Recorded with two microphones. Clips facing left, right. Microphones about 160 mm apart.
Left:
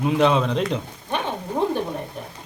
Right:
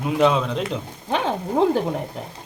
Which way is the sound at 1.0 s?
90° right.